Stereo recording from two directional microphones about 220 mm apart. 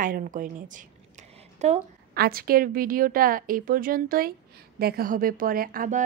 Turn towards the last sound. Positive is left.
turn(degrees=-40)  # may be behind; listen again after turning